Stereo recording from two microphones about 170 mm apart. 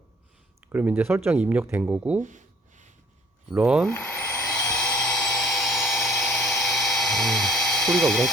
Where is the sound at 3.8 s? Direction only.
10° left (ahead or behind).